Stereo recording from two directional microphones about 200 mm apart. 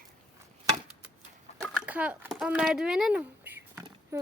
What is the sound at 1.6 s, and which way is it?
Speech, centre (ahead or behind).